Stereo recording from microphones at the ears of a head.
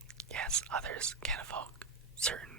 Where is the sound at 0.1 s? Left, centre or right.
Right.